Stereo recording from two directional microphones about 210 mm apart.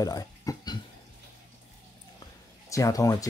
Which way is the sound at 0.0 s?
15° left (ahead or behind).